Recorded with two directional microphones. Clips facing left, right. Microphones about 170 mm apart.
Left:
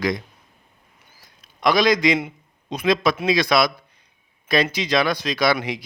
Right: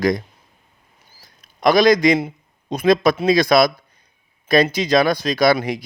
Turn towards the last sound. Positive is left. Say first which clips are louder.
# right 5 dB
turn(degrees=-40)  # may be behind; listen again after turning